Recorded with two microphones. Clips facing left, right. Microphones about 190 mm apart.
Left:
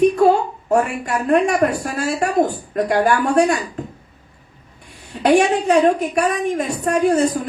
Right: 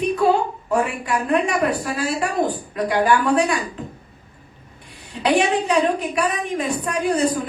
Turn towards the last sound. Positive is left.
turn(degrees=45)  # may be behind; listen again after turning